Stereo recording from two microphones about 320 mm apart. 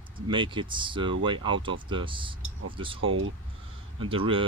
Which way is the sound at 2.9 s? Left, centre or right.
Right.